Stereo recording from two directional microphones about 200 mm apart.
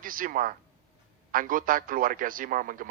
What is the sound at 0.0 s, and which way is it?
A man's voice, 45° right (ahead or behind).